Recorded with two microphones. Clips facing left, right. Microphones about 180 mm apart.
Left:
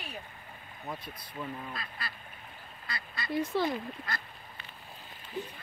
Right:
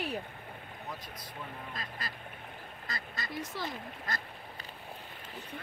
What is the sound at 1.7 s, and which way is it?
Duck, 40° right (ahead or behind).